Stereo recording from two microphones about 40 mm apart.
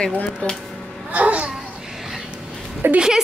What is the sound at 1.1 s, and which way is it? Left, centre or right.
Babbling, right.